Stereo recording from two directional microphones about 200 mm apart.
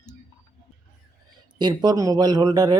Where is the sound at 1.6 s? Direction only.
20° right (ahead or behind).